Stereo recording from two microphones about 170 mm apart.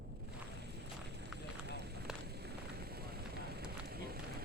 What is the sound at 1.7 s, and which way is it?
Run, 75° right (ahead or behind).